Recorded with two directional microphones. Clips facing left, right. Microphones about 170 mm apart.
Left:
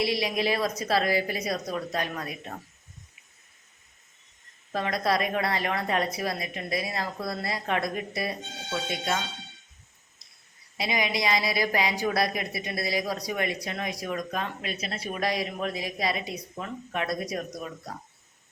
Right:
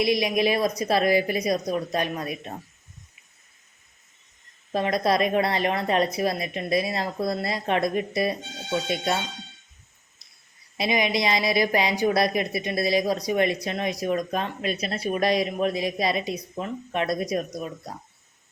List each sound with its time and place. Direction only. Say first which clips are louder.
0.0 s speech: right 5 dB; 15° right (ahead or behind)
4.7 s a woman's voice: right 4 dB; 20° right (ahead or behind)
10.8 s a woman's voice: right 5 dB; 20° right (ahead or behind)